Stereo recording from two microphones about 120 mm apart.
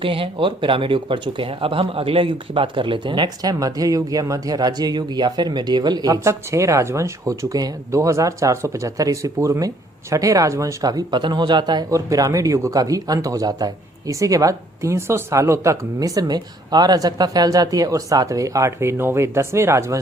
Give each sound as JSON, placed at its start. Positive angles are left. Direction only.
{"t": 0.0, "sound": "speech", "side_deg": -45}